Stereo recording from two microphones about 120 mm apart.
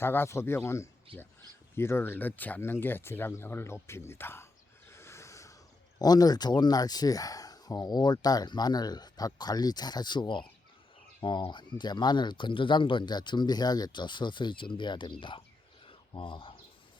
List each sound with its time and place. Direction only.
0.0 s speech: 20° left (ahead or behind)
1.1 s speech: 50° right (ahead or behind)
1.7 s speech: 20° left (ahead or behind)
4.9 s a sound: 20° left (ahead or behind)
6.0 s speech: 35° left (ahead or behind)
15.9 s a sound: 45° left (ahead or behind)